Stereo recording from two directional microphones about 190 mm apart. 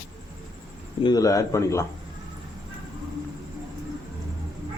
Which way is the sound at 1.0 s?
20° left (ahead or behind).